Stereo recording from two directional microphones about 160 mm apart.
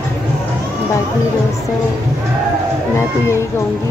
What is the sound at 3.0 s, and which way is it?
Speech, 15° left (ahead or behind).